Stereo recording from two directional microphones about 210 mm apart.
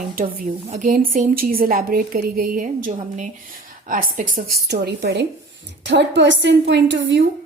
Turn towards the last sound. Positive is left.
turn(degrees=-60)  # may be behind; listen again after turning